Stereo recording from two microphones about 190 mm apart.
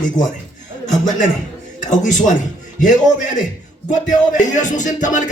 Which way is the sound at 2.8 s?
40° left (ahead or behind).